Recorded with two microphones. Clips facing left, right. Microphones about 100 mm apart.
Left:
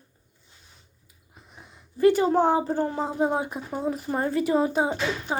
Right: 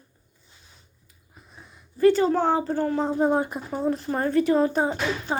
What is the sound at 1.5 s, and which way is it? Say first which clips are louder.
Speech: right 1 dB; 20° left (ahead or behind).